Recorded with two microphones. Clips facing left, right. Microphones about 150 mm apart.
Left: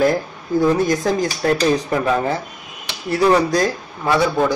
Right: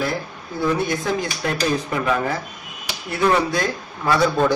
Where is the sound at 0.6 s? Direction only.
40° left (ahead or behind).